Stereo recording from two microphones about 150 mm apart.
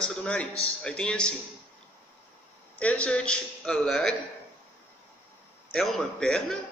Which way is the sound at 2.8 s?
10° left (ahead or behind).